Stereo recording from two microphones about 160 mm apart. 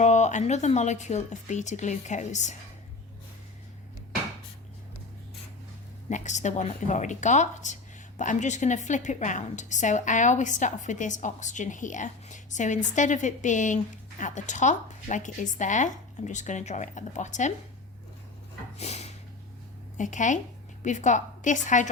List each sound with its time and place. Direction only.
0.0 s a woman's voice: 50° left (ahead or behind)
6.1 s a woman's voice: 50° left (ahead or behind)
18.8 s a sound: 45° left (ahead or behind)
20.0 s a woman's voice: 50° left (ahead or behind)